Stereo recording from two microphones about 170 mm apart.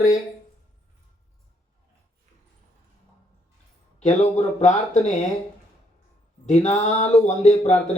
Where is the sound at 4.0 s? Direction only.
45° left (ahead or behind).